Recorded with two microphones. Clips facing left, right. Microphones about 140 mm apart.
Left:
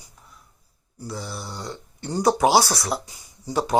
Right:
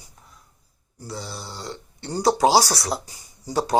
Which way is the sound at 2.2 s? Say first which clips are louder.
Even; 30° right (ahead or behind).